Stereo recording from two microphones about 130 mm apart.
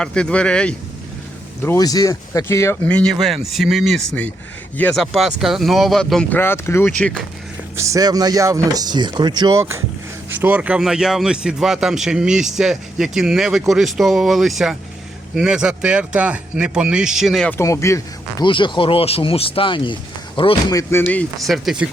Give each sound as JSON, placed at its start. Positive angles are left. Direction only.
{"t": 0.0, "sound": "speech", "side_deg": 5}
{"t": 1.6, "sound": "speech", "side_deg": 25}
{"t": 2.9, "sound": "a man's voice", "side_deg": 5}
{"t": 6.4, "sound": "speech", "side_deg": 20}
{"t": 7.8, "sound": "a man's voice", "side_deg": -25}
{"t": 17.6, "sound": "speech", "side_deg": 20}
{"t": 18.4, "sound": "speech", "side_deg": 40}
{"t": 20.7, "sound": "speech", "side_deg": 25}
{"t": 21.3, "sound": "a man's voice", "side_deg": 0}